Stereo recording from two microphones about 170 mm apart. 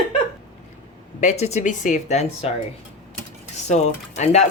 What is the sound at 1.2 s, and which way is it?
Speech, 40° left (ahead or behind).